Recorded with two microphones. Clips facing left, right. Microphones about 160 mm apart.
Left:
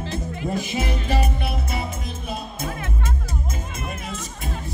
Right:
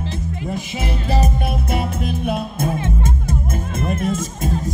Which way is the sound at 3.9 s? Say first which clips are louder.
Right 11 dB; 45° right (ahead or behind).